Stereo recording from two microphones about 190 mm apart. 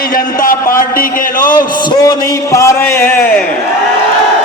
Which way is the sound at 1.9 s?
20° left (ahead or behind).